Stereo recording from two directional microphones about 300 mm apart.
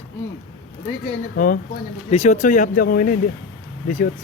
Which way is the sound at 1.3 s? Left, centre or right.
Left.